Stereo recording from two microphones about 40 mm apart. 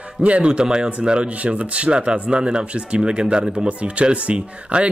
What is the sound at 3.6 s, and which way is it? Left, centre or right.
Speech, right.